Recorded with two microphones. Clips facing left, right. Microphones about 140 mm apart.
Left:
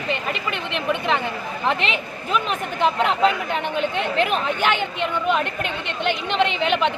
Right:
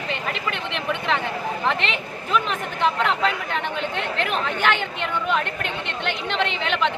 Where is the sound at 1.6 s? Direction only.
10° left (ahead or behind).